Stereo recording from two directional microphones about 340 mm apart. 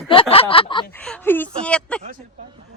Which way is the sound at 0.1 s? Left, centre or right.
Centre.